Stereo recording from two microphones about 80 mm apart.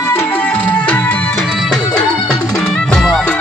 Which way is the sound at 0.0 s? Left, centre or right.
Left.